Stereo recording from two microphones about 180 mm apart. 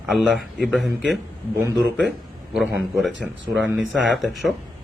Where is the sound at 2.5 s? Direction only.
Centre (ahead or behind).